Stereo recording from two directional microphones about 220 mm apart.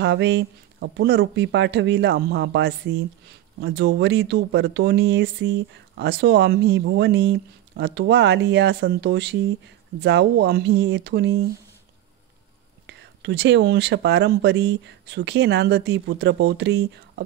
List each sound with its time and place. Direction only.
0.0 s speech: 55° right (ahead or behind)
12.8 s speech: 50° right (ahead or behind)